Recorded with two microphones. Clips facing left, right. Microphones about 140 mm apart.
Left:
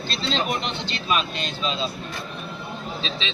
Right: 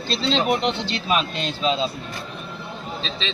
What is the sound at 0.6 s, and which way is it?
Speech, 75° right (ahead or behind).